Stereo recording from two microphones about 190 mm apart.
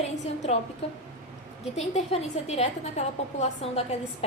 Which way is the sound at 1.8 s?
35° left (ahead or behind).